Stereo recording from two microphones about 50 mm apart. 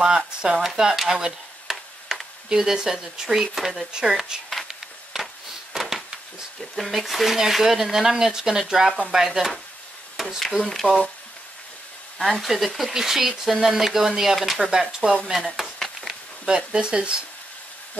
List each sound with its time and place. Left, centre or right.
0.0 s speech: centre
5.2 s a sound: centre
6.8 s speech: centre
10.1 s a sound: centre
10.6 s speech: centre
12.2 s speech: centre
14.6 s speech: centre
15.3 s a sound: centre
16.4 s speech: centre